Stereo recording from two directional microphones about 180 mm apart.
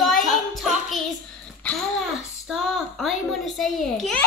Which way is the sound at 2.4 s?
Centre (ahead or behind).